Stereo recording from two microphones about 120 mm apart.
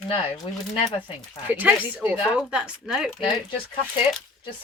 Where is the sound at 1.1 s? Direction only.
15° right (ahead or behind).